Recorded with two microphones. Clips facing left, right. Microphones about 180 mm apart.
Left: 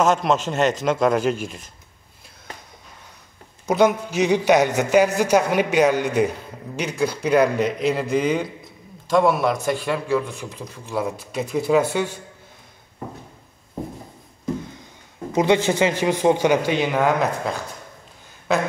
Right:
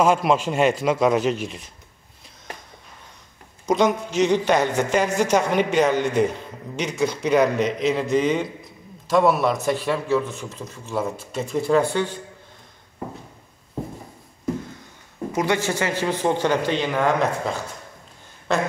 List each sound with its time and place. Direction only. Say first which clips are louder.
0.0 s a man's voice: even; 10° right (ahead or behind)
3.6 s a man's voice: left 2 dB; 5° left (ahead or behind)
15.3 s a man's voice: left 5 dB; 20° left (ahead or behind); by 17.6 s 5° left (ahead or behind)